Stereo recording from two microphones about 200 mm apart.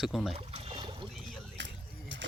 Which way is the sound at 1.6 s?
60° right (ahead or behind).